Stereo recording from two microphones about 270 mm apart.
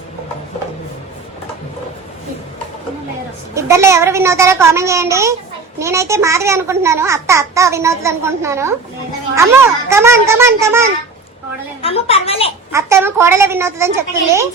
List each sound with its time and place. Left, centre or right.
3.5 s a child's voice: centre
11.8 s a woman's voice: left
12.7 s a child's voice: centre